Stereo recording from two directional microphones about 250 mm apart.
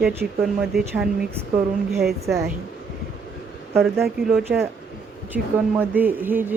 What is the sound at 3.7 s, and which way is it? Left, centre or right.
Speech, centre.